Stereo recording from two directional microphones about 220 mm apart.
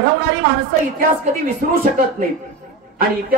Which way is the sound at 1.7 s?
40° right (ahead or behind).